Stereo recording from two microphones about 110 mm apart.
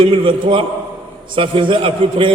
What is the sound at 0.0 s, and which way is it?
A man's voice, 50° right (ahead or behind).